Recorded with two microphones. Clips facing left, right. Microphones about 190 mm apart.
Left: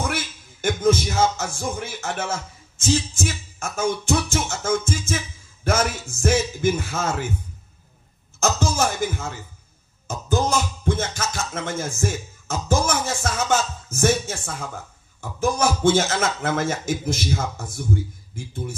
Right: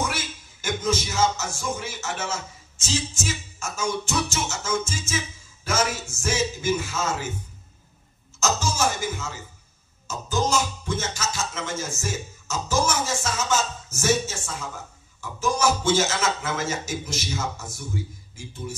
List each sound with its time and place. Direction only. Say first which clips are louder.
0.0 s music: left 2 dB; 55° left (ahead or behind)
8.4 s music: left 3 dB; 55° left (ahead or behind)